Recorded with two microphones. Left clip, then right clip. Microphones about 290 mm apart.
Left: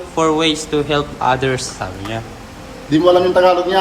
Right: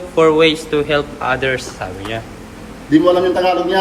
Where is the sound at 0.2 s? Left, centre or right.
Centre.